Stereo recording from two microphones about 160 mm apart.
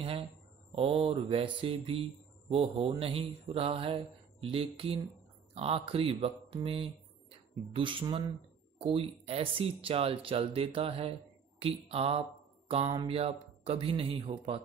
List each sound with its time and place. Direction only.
0.7 s speech: 35° right (ahead or behind)